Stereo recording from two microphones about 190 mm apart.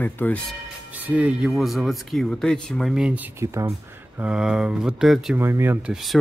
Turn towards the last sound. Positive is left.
turn(degrees=0)  # may be behind; listen again after turning